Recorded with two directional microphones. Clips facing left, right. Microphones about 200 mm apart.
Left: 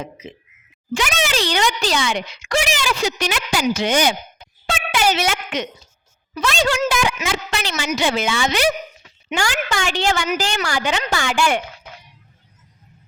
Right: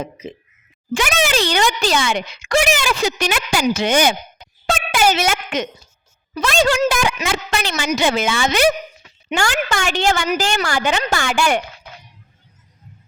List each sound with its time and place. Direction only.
0.0 s speech: 40° right (ahead or behind)
0.9 s speech: 50° right (ahead or behind)